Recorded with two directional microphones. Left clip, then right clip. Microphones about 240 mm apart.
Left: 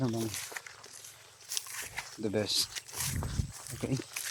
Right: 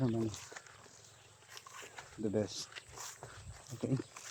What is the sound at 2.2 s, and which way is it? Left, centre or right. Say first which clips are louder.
Speech: left 6 dB; centre.